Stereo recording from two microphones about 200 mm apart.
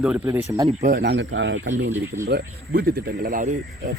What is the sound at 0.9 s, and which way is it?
Speech, 55° right (ahead or behind).